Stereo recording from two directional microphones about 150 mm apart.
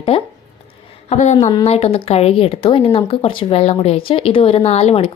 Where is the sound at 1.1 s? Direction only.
50° left (ahead or behind).